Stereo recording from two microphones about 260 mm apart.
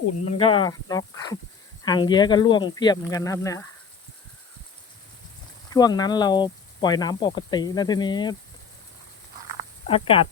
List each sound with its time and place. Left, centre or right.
0.3 s speech: left
5.7 s speech: centre
9.8 s speech: left